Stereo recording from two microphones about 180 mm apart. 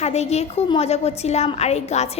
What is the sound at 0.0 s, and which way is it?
A woman's voice, 35° left (ahead or behind).